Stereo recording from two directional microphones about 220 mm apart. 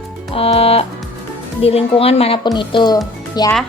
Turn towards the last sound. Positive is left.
turn(degrees=15)  # may be behind; listen again after turning